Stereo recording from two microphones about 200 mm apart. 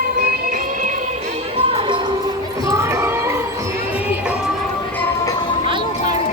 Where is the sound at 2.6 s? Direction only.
15° right (ahead or behind).